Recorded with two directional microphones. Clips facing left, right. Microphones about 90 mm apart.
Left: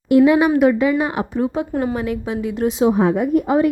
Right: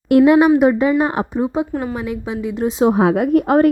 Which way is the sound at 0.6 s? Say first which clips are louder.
Right 1 dB; 35° right (ahead or behind).